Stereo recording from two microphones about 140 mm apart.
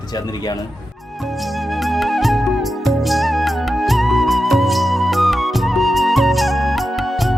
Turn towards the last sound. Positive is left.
turn(degrees=0)  # may be behind; listen again after turning